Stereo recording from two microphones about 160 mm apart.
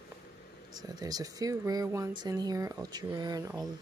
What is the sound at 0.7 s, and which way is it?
Speech, 25° right (ahead or behind).